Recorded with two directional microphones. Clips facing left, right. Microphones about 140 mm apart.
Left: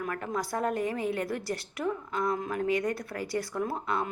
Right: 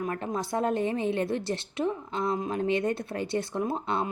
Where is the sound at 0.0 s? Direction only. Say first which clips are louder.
Right 2 dB; 25° right (ahead or behind).